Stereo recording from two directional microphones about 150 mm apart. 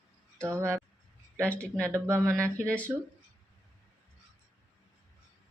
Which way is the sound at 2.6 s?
10° left (ahead or behind).